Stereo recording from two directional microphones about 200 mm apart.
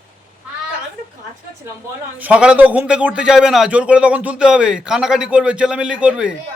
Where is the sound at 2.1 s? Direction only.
5° right (ahead or behind).